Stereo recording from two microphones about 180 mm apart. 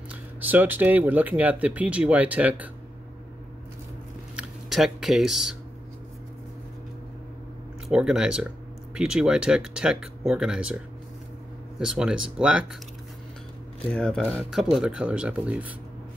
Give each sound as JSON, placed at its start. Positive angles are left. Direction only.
{"t": 0.1, "sound": "speech", "side_deg": -10}
{"t": 4.4, "sound": "speech", "side_deg": 0}
{"t": 7.9, "sound": "speech", "side_deg": -5}
{"t": 11.8, "sound": "speech", "side_deg": -5}
{"t": 13.8, "sound": "speech", "side_deg": 5}